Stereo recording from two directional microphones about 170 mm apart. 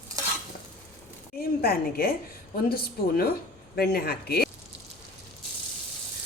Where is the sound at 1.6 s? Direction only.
65° left (ahead or behind).